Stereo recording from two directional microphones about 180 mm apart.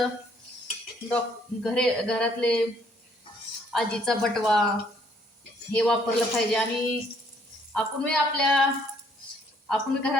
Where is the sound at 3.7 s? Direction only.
Centre (ahead or behind).